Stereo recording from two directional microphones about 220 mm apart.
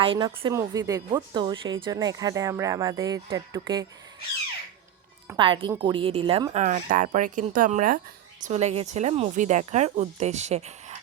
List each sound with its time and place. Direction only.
0.0 s a woman's voice: 20° right (ahead or behind)
5.4 s a woman's voice: 20° right (ahead or behind)